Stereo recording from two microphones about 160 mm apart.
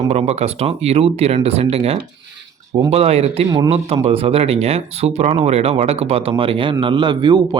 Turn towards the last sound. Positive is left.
turn(degrees=-25)  # may be behind; listen again after turning